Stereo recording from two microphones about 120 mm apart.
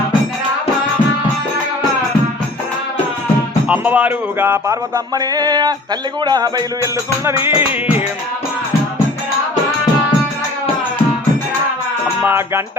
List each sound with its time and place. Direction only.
3.7 s music: 10° right (ahead or behind); by 7.3 s 30° right (ahead or behind)
7.4 s music: 15° right (ahead or behind)
12.2 s music: 20° right (ahead or behind)